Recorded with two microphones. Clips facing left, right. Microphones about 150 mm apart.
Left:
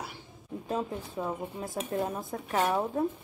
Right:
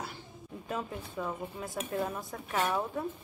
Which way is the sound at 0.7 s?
30° left (ahead or behind).